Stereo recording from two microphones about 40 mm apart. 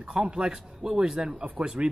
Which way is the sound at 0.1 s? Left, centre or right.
Right.